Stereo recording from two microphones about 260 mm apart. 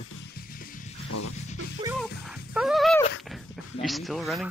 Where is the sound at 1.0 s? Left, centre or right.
Left.